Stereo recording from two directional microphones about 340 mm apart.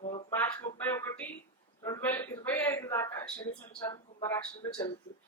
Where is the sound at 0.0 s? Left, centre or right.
Centre.